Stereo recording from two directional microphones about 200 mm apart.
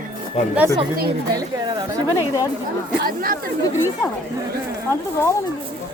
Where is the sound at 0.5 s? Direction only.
15° right (ahead or behind).